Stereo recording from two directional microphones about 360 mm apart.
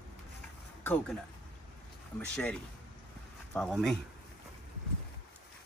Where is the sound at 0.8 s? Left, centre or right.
Centre.